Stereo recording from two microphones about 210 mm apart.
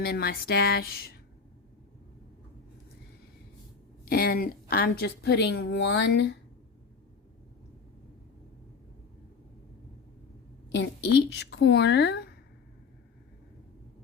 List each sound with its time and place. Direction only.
0.0 s a woman's voice: 45° left (ahead or behind)
4.1 s a woman's voice: 45° left (ahead or behind)
10.7 s a woman's voice: 55° left (ahead or behind)